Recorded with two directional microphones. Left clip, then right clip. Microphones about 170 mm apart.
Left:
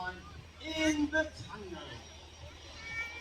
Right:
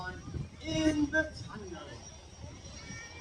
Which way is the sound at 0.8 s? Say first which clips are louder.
Right 1 dB; 40° left (ahead or behind).